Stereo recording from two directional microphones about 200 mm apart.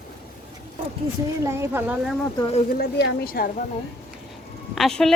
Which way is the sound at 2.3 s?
25° left (ahead or behind).